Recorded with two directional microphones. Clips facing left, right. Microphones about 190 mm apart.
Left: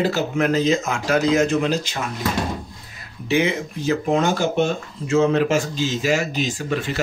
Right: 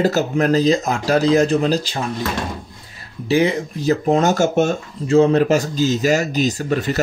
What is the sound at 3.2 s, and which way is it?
Speech, 35° right (ahead or behind).